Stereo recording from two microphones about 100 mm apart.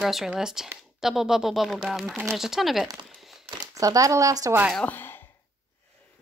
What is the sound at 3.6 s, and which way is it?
Speech, 35° right (ahead or behind).